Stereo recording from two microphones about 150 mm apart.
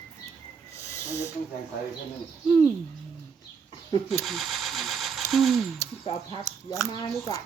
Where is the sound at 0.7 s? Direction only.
20° left (ahead or behind).